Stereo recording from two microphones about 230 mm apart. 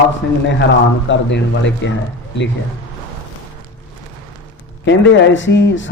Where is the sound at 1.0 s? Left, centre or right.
Left.